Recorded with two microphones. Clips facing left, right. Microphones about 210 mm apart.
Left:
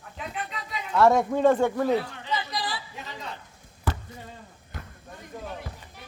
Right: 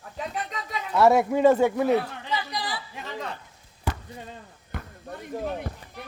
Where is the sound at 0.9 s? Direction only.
10° right (ahead or behind).